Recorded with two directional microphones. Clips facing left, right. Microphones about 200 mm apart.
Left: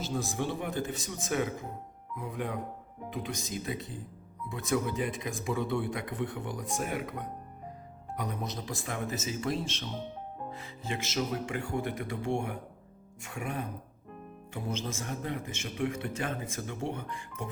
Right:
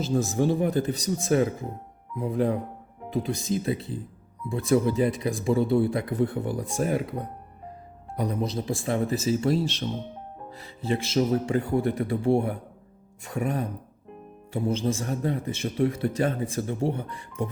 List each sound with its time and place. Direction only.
0.3 s a man's voice: 40° right (ahead or behind)